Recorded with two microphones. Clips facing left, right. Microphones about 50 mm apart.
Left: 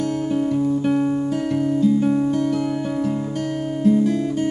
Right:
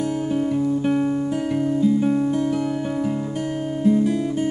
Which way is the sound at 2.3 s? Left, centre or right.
Centre.